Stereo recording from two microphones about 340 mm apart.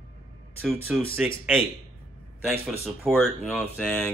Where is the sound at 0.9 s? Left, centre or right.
Centre.